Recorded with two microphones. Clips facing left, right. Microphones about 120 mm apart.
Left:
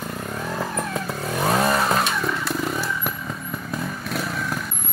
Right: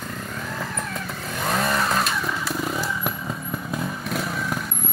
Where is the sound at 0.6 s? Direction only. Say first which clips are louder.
Left 5 dB; 35° left (ahead or behind).